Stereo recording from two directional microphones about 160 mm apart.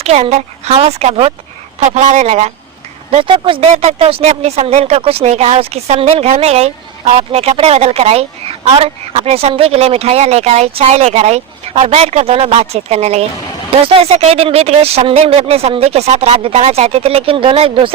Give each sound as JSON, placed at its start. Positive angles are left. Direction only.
{"t": 0.0, "sound": "speech", "side_deg": -40}